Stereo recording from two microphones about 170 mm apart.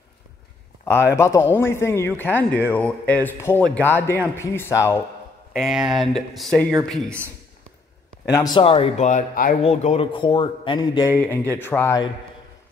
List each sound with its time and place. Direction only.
1.1 s speech: 15° left (ahead or behind)
5.5 s speech: centre (ahead or behind)
8.3 s speech: 15° left (ahead or behind)
8.5 s speech: 35° left (ahead or behind); by 9.6 s 55° left (ahead or behind)
9.6 s a man's voice: 35° left (ahead or behind)
11.5 s speech: 10° left (ahead or behind)